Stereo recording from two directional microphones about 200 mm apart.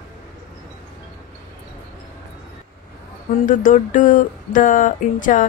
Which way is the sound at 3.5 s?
40° left (ahead or behind).